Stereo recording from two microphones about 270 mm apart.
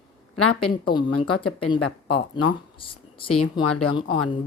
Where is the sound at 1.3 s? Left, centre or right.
Left.